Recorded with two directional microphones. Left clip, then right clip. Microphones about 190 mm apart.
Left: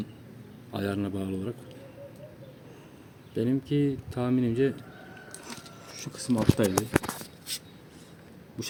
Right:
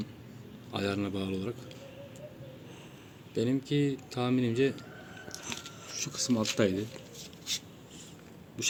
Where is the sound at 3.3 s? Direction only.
40° left (ahead or behind).